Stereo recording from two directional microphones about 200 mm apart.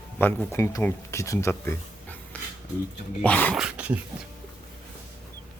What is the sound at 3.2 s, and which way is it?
Speech, 5° left (ahead or behind).